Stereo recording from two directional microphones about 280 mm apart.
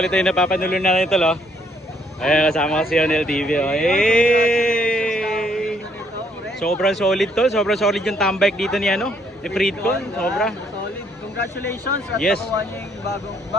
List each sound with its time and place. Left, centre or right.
0.0 s speech: centre
0.5 s speech: left
0.9 s speech: centre
12.2 s speech: centre